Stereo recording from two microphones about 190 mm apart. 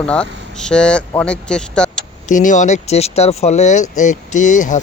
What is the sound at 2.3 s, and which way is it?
Speech, 40° left (ahead or behind).